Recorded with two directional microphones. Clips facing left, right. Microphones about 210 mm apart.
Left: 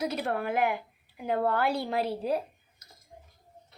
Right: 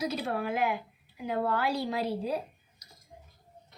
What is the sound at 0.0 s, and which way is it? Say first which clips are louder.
Speech: left 1 dB; 60° left (ahead or behind).